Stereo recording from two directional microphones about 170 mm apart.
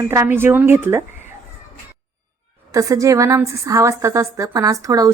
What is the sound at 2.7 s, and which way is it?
A woman's voice, 20° right (ahead or behind).